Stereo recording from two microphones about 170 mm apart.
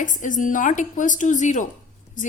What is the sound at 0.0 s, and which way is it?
A woman's voice, 50° left (ahead or behind).